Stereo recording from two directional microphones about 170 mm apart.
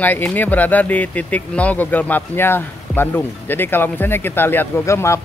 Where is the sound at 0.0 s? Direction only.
10° left (ahead or behind).